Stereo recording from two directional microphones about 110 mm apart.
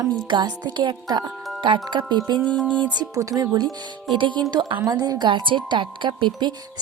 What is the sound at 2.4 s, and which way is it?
Music, 10° left (ahead or behind).